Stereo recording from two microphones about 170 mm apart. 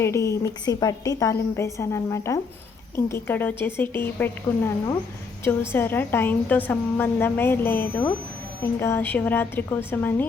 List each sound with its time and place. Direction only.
0.0 s a woman's voice: 15° left (ahead or behind)